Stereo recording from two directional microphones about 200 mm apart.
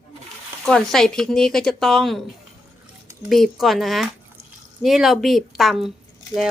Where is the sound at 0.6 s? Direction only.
Centre (ahead or behind).